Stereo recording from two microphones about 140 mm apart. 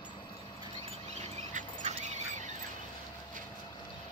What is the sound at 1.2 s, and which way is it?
Dog, 55° right (ahead or behind).